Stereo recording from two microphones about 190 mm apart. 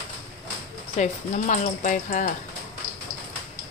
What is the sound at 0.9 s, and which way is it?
Speech, 40° left (ahead or behind).